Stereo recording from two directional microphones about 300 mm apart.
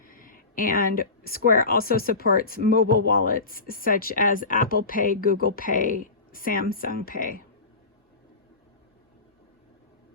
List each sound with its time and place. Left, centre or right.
0.1 s speech: left